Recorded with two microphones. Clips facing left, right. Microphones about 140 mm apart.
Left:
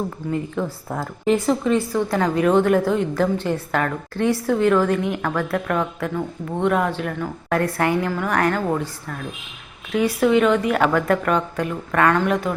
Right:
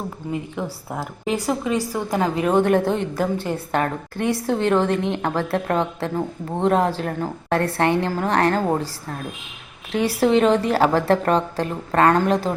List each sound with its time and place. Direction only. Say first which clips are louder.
0.3 s a woman's voice: left 1 dB; 10° right (ahead or behind)
2.6 s a woman's voice: left 1 dB; 25° right (ahead or behind)